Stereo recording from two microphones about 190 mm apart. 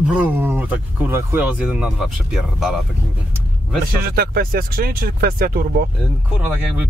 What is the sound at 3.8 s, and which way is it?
Speech, 55° right (ahead or behind).